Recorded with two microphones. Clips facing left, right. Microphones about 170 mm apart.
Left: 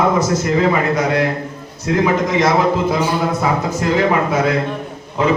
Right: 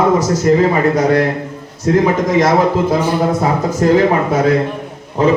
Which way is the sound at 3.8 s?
40° right (ahead or behind).